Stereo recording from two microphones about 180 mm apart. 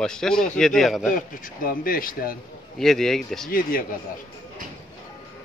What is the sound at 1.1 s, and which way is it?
Speech, 50° left (ahead or behind).